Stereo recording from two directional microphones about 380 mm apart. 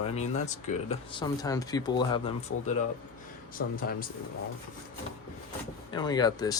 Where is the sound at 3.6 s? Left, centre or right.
Left.